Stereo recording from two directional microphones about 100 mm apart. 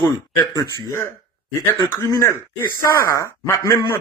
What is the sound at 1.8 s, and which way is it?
Speech, 40° left (ahead or behind).